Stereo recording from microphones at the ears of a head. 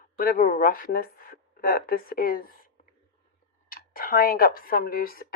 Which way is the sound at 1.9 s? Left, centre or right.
Left.